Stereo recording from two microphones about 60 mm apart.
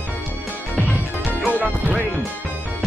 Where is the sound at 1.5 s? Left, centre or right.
Right.